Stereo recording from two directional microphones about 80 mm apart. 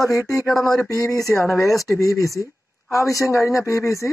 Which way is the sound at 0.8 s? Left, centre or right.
Left.